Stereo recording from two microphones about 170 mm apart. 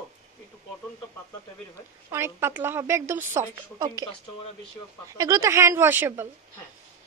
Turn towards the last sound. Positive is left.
turn(degrees=-15)  # may be behind; listen again after turning